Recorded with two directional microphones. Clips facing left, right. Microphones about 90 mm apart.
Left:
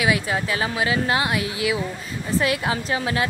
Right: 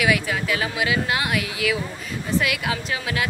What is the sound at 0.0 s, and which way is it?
Speech, 30° left (ahead or behind).